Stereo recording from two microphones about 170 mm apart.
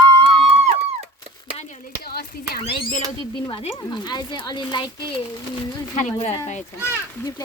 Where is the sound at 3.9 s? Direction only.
25° left (ahead or behind).